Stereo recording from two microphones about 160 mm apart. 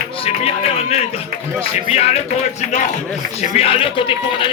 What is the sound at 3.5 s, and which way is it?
Speech, 35° left (ahead or behind).